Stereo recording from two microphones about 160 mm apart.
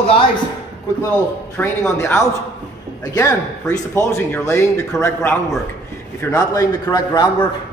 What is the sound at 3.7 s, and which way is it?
A man's voice, 15° left (ahead or behind).